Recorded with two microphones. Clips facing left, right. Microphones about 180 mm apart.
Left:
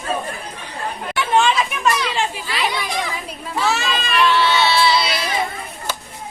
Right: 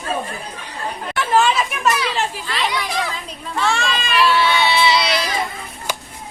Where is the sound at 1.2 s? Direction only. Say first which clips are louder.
Even; centre (ahead or behind).